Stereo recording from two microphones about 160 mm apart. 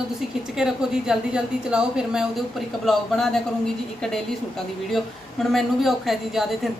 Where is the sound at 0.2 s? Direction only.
5° right (ahead or behind).